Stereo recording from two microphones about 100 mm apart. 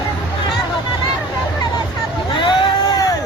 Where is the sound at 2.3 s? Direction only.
55° left (ahead or behind).